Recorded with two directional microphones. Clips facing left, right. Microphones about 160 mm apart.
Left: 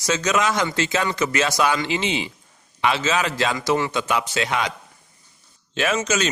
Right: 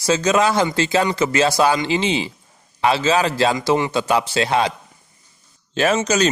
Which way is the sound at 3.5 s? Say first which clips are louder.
Right 3 dB; 20° right (ahead or behind).